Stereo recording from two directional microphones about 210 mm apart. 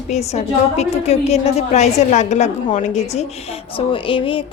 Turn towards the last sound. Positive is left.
turn(degrees=25)  # may be behind; listen again after turning